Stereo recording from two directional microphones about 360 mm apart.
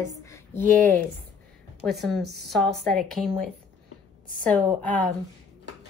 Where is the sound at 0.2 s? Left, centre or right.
Centre.